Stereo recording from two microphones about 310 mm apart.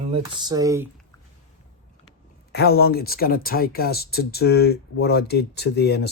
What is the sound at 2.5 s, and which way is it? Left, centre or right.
Speech, left.